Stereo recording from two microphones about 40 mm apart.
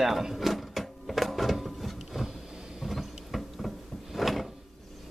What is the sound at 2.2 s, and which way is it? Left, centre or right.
Vehicle, right.